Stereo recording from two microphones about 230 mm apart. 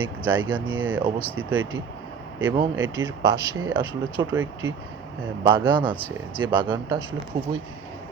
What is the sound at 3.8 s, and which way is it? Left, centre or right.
Speech, left.